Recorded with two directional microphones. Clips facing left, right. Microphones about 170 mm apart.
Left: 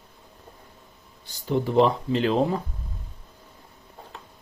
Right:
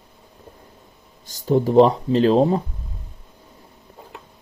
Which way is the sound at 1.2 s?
40° right (ahead or behind).